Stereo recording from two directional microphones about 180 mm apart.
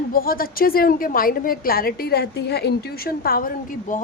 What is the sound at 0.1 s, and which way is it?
A woman's voice, 55° left (ahead or behind).